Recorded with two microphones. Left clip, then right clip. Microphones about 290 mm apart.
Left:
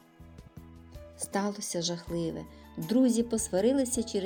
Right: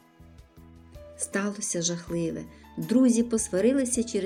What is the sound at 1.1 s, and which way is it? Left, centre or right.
Speech, centre.